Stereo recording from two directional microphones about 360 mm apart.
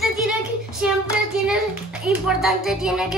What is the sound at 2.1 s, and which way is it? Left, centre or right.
Speech, centre.